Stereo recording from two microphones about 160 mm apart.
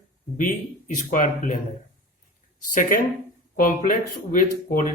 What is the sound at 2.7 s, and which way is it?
Speech, 55° left (ahead or behind).